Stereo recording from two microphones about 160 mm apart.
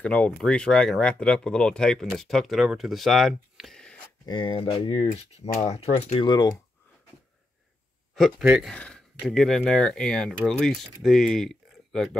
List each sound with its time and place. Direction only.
0.0 s speech: 5° left (ahead or behind)
4.3 s speech: 30° left (ahead or behind)
6.2 s speech: 25° left (ahead or behind)
8.1 s speech: centre (ahead or behind)